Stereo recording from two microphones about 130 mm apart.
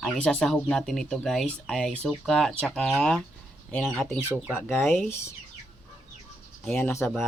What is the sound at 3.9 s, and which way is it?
Speech, 20° left (ahead or behind).